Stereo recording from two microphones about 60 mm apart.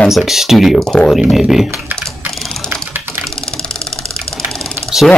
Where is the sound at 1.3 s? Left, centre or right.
Centre.